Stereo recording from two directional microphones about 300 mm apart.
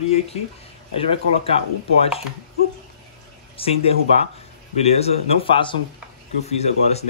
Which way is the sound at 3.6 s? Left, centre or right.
Centre.